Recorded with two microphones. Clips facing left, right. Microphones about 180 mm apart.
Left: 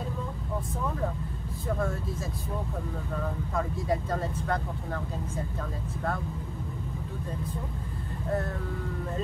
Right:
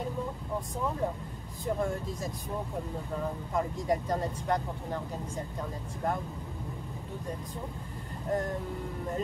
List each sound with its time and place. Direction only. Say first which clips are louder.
1.7 s speech: even; 15° right (ahead or behind)
3.2 s speech: even; 15° right (ahead or behind)
8.3 s speech: even; 15° right (ahead or behind)